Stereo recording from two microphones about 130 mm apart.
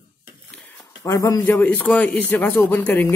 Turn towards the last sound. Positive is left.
turn(degrees=15)  # may be behind; listen again after turning